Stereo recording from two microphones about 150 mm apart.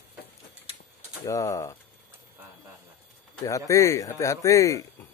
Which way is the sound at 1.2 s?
20° left (ahead or behind).